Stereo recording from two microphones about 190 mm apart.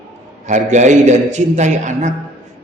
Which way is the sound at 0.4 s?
40° right (ahead or behind).